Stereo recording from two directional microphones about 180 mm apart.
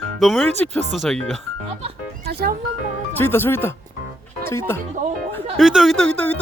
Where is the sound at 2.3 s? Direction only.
60° right (ahead or behind).